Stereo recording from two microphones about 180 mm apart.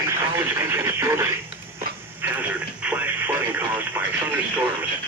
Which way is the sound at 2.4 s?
10° right (ahead or behind).